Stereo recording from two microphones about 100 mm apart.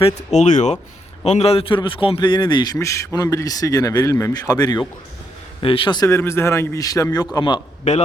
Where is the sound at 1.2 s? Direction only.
90° left; by 2.8 s 45° left (ahead or behind).